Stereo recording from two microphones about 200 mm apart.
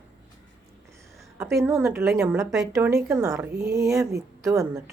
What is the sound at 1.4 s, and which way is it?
A woman's voice, 15° right (ahead or behind).